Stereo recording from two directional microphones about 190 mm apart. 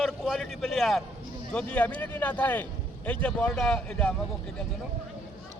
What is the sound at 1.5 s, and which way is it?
Speech, 5° left (ahead or behind).